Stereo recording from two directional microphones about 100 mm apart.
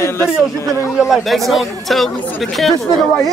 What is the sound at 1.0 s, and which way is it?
Speech, centre (ahead or behind).